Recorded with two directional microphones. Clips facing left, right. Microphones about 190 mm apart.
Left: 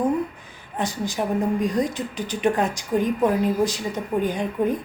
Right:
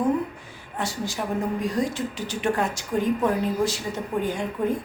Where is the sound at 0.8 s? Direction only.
20° left (ahead or behind).